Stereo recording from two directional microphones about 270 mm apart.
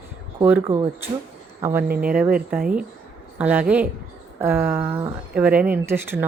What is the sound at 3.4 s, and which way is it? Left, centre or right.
Speech, centre.